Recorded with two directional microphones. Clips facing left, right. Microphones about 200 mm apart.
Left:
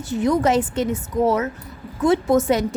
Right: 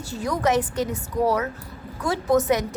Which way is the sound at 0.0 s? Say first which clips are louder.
Left 6 dB; 20° left (ahead or behind).